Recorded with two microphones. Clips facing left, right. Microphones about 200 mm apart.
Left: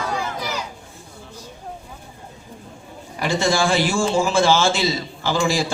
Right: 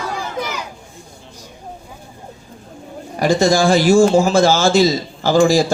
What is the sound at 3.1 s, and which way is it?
A man's voice, 40° right (ahead or behind).